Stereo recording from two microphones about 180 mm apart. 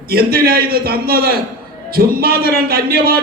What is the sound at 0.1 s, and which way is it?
Speech, 55° right (ahead or behind).